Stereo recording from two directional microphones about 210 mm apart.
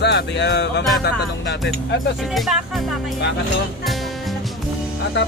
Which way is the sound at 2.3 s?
Centre (ahead or behind).